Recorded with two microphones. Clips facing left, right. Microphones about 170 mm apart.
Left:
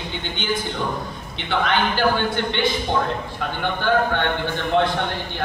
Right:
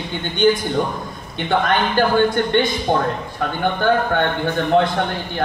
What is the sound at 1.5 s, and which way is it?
Speech, 50° right (ahead or behind).